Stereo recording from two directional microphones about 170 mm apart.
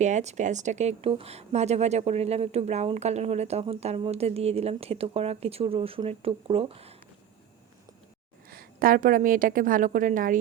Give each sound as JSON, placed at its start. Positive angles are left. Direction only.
{"t": 0.0, "sound": "speech", "side_deg": -45}
{"t": 8.4, "sound": "a woman's voice", "side_deg": -60}